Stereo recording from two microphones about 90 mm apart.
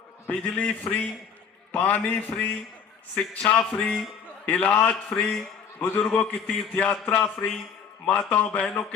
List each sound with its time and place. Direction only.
0.3 s a man's voice: 15° left (ahead or behind)